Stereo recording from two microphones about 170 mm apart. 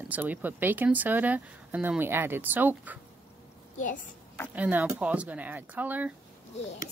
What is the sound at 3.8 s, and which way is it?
Speech, 50° left (ahead or behind).